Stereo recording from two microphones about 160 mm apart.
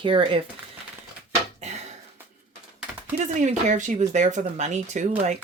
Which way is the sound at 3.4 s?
50° right (ahead or behind).